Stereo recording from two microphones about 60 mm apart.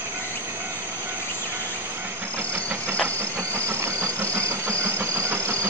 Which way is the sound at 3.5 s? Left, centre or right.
Right.